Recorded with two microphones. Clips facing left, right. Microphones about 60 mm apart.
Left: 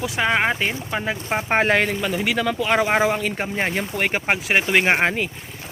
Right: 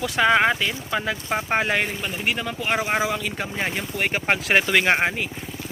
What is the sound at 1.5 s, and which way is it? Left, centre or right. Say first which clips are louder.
Speech: left 5 dB; left.